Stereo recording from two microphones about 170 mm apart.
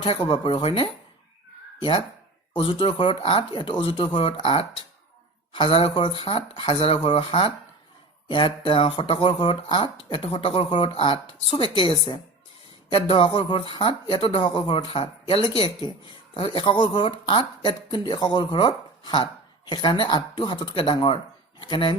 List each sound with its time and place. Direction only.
0.0 s speech: 30° left (ahead or behind)
2.5 s speech: 30° left (ahead or behind)